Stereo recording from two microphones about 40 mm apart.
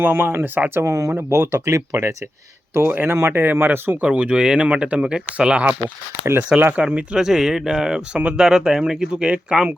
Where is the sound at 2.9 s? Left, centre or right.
Right.